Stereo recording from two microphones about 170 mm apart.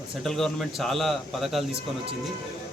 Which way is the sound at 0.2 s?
Centre (ahead or behind).